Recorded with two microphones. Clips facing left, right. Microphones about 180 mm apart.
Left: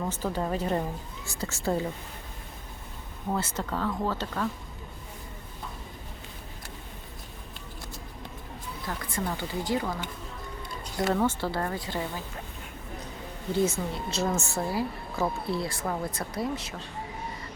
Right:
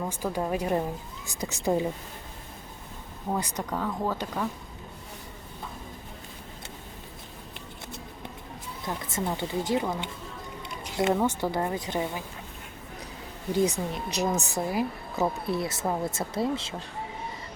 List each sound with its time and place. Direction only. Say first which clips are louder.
0.0 s speech: even; 5° right (ahead or behind)
3.2 s speech: even; 15° right (ahead or behind)
8.9 s a woman's voice: right 2 dB; 20° right (ahead or behind)
10.7 s a sound: right 2 dB; 20° right (ahead or behind)
11.2 s speech: right 1 dB; 15° right (ahead or behind)
13.5 s a woman's voice: right 1 dB; 15° right (ahead or behind)